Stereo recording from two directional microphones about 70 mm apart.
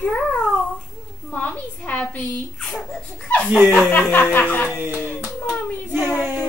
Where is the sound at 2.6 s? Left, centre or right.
Centre.